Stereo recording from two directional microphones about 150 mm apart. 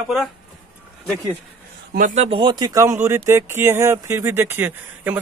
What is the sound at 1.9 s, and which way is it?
Speech, 55° right (ahead or behind).